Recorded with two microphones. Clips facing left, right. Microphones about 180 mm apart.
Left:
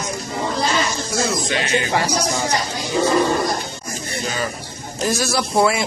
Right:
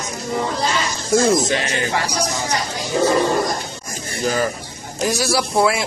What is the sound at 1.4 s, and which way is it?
Speech, 40° right (ahead or behind).